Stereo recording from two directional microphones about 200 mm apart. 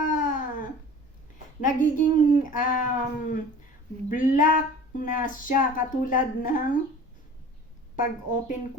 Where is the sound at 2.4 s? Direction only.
40° left (ahead or behind).